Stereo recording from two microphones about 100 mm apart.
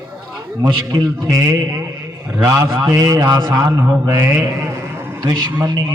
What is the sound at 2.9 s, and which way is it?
Speech, 40° right (ahead or behind).